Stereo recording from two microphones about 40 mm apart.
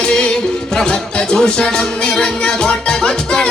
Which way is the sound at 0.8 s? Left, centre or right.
Centre.